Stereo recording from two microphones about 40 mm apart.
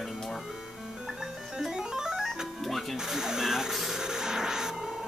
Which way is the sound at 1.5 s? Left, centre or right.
Centre.